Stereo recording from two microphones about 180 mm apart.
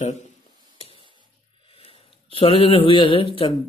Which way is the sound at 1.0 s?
25° right (ahead or behind).